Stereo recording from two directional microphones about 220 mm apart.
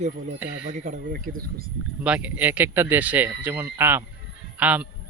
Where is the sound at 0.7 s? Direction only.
30° right (ahead or behind).